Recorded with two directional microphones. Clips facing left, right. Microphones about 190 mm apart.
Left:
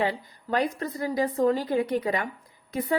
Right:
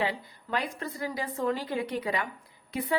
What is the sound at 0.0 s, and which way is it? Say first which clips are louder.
A woman's voice: left 3 dB; 45° left (ahead or behind).